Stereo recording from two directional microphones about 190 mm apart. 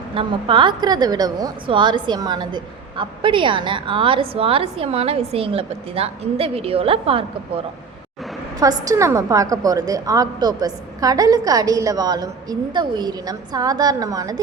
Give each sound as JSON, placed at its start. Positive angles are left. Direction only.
{"t": 0.1, "sound": "a woman's voice", "side_deg": -30}
{"t": 8.6, "sound": "a woman's voice", "side_deg": -20}